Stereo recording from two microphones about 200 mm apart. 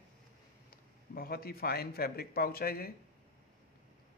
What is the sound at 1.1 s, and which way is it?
A man's voice, 50° left (ahead or behind).